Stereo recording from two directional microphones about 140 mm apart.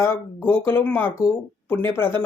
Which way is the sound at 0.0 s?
20° left (ahead or behind).